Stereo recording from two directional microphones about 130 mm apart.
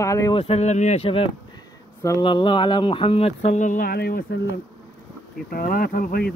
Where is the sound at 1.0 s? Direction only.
45° left (ahead or behind).